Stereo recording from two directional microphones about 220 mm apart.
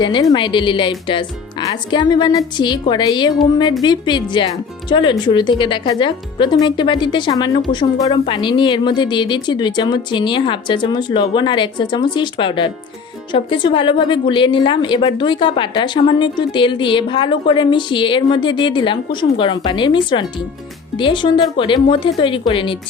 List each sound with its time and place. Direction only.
0.0 s a woman's voice: 20° left (ahead or behind)